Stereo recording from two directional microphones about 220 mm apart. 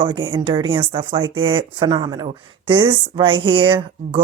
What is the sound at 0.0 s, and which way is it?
Speech, 25° right (ahead or behind).